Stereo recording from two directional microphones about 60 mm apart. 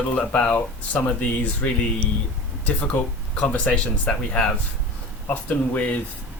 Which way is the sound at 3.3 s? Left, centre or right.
Left.